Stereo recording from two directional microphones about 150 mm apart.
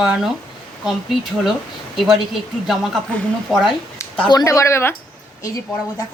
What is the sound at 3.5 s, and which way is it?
Speech, centre (ahead or behind).